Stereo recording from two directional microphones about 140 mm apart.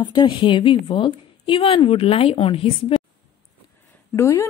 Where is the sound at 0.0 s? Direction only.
35° left (ahead or behind).